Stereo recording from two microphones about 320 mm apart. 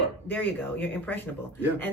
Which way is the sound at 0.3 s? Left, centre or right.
Centre.